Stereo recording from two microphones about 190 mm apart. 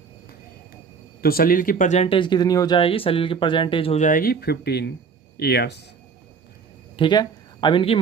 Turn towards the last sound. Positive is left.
turn(degrees=25)  # may be behind; listen again after turning